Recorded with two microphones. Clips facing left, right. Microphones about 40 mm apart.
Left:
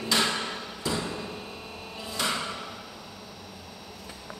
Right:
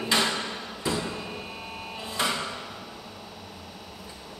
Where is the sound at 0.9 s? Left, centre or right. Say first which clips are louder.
Right 1 dB; centre.